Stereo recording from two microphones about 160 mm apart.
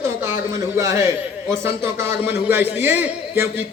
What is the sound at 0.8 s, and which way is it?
A man's voice, 20° right (ahead or behind).